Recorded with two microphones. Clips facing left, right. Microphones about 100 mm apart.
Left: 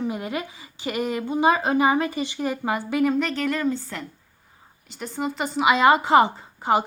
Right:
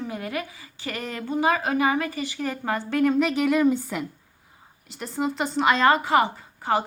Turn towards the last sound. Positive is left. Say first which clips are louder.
# left 3 dB
turn(degrees=20)  # may be behind; listen again after turning